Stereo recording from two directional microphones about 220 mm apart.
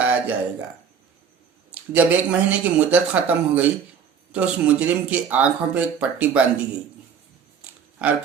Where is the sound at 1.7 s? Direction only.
5° right (ahead or behind).